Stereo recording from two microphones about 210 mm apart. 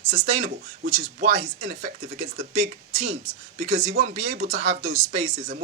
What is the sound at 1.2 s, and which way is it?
Speech, 40° right (ahead or behind).